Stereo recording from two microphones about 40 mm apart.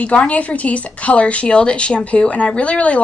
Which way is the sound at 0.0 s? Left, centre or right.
Left.